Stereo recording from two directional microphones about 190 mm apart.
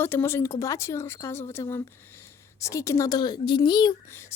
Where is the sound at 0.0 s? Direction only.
10° left (ahead or behind).